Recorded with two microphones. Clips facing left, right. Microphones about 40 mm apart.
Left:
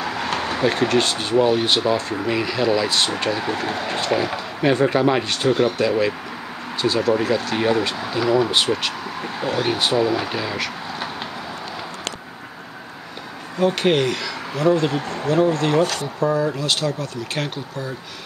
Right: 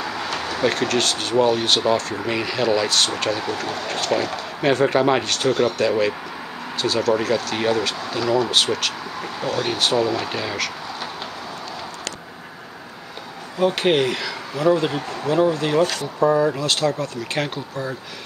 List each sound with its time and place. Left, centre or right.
0.0 s a sound: centre
0.3 s a sound: left
0.6 s speech: centre
2.2 s speech: centre
4.6 s speech: centre
13.6 s speech: centre